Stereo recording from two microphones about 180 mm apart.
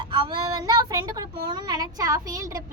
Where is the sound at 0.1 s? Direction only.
25° right (ahead or behind).